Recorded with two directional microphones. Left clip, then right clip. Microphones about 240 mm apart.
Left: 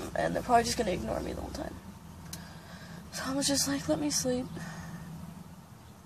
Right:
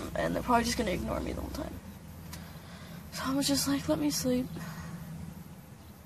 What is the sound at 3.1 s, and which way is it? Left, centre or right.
Speech, centre.